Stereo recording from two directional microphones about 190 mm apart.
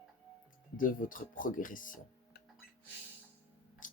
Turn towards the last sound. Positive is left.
turn(degrees=45)  # may be behind; listen again after turning